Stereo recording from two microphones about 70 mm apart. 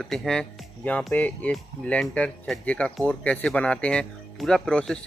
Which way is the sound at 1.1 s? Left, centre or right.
Left.